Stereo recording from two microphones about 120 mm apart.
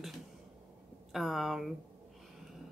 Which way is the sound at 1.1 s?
Centre (ahead or behind).